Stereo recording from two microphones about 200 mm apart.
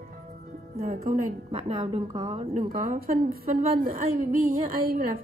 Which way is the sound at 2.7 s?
45° right (ahead or behind).